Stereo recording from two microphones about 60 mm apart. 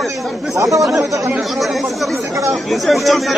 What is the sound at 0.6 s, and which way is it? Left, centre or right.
Speech, right.